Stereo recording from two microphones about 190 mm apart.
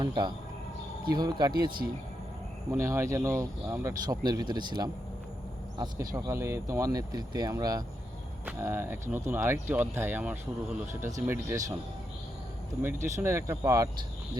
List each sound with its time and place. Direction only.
0.0 s speech: 25° right (ahead or behind)
2.7 s speech: 15° right (ahead or behind)
12.8 s speech: 10° right (ahead or behind)